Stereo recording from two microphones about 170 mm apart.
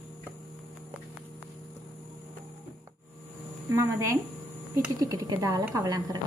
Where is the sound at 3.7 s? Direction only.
15° right (ahead or behind).